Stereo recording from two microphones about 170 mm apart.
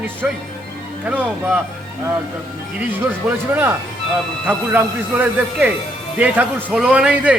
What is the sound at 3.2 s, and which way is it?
A man's voice, 10° right (ahead or behind).